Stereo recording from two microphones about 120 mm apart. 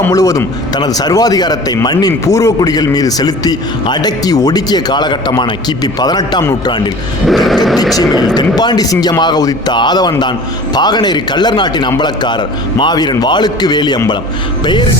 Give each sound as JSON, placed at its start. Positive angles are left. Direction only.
{"t": 0.1, "sound": "a man's voice", "side_deg": 30}
{"t": 7.3, "sound": "a sound", "side_deg": 0}
{"t": 7.9, "sound": "a man's voice", "side_deg": 35}